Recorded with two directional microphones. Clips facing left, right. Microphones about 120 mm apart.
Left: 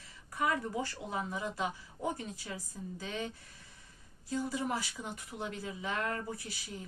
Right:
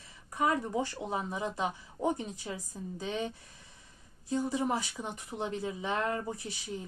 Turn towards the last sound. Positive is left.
turn(degrees=-25)  # may be behind; listen again after turning